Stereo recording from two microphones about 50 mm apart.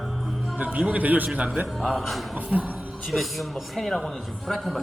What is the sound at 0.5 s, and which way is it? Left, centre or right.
Speech, right.